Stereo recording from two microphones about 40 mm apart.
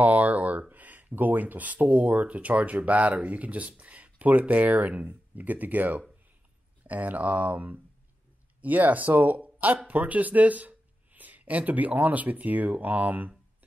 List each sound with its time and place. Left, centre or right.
0.0 s speech: right